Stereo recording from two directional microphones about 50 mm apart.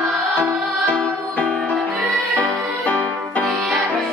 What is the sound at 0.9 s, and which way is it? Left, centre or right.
Music, left.